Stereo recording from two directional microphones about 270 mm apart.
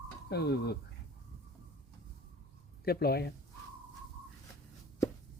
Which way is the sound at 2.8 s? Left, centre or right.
Left.